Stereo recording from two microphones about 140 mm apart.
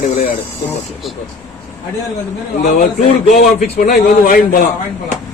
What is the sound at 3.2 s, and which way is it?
Speech, 55° left (ahead or behind).